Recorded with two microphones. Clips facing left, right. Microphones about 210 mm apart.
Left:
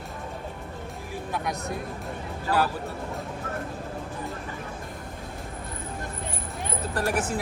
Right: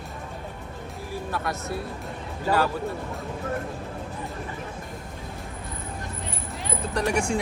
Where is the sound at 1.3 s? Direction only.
15° left (ahead or behind).